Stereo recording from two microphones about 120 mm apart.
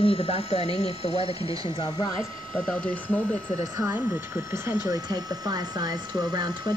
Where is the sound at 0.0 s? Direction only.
55° left (ahead or behind).